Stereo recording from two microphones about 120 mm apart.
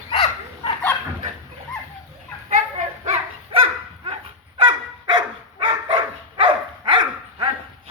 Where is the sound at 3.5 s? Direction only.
50° right (ahead or behind).